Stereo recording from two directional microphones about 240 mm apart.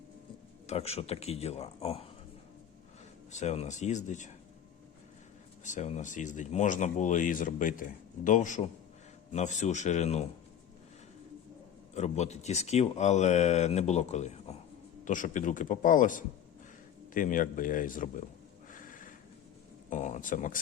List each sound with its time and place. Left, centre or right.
0.7 s speech: left
3.3 s speech: left
5.6 s speech: left
11.9 s speech: left
18.7 s a sound: left
19.9 s speech: left